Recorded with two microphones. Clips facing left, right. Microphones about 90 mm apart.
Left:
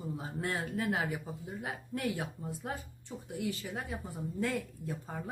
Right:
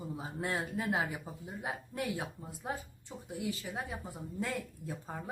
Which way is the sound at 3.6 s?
10° right (ahead or behind).